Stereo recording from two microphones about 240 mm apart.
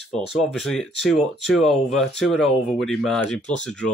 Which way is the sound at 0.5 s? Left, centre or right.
Centre.